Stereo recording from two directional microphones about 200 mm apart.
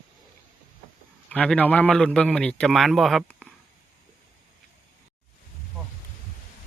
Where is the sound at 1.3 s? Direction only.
5° left (ahead or behind).